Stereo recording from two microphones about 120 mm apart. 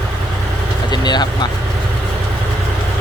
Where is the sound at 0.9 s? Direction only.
35° left (ahead or behind).